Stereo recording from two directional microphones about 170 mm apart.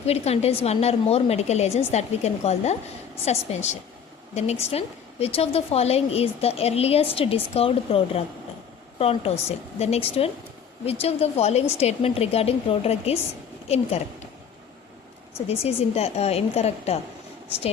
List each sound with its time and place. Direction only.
0.0 s a woman's voice: 40° left (ahead or behind)
15.4 s a woman's voice: 35° left (ahead or behind)